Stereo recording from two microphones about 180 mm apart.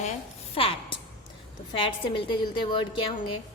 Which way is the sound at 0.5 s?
30° left (ahead or behind).